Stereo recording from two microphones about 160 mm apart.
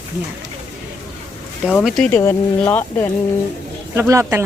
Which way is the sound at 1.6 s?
Centre (ahead or behind).